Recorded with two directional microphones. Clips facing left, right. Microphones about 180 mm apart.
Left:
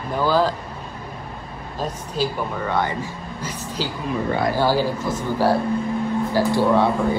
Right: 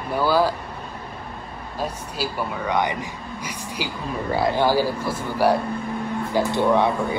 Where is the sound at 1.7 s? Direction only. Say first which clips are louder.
Left 3 dB; 10° right (ahead or behind).